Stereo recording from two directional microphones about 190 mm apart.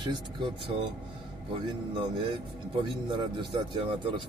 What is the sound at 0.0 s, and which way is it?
Speech, 25° right (ahead or behind).